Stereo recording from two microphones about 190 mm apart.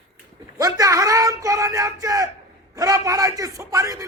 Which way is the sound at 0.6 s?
20° right (ahead or behind).